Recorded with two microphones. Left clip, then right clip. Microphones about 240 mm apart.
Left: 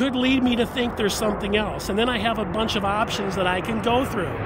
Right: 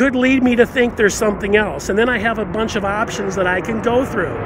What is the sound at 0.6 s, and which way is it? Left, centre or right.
Speech, centre.